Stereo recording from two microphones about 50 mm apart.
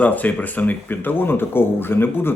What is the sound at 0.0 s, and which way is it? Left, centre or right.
Speech, left.